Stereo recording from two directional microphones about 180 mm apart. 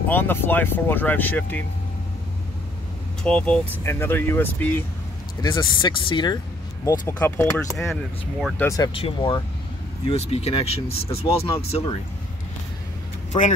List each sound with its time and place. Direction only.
0.1 s speech: 10° left (ahead or behind)
3.3 s speech: 5° left (ahead or behind)
5.4 s speech: 25° left (ahead or behind)
7.9 s speech: centre (ahead or behind)
8.5 s speech: 15° left (ahead or behind)
8.9 s speech: 30° left (ahead or behind)
13.3 s speech: 25° left (ahead or behind)